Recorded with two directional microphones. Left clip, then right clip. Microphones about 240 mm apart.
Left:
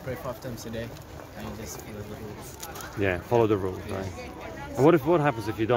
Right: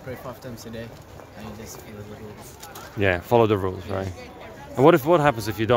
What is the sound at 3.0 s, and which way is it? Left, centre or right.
Speech, right.